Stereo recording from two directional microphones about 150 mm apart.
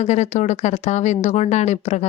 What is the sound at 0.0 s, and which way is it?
A woman's voice, 50° left (ahead or behind).